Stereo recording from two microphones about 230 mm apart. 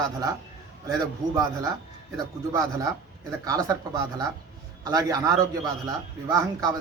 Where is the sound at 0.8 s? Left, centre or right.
Centre.